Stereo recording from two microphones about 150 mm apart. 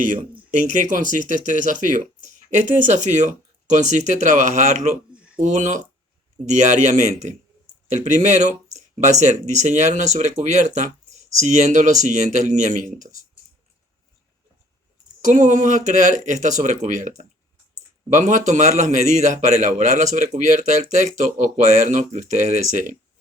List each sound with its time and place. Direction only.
0.0 s a man's voice: 60° right (ahead or behind)
15.2 s a man's voice: 55° right (ahead or behind)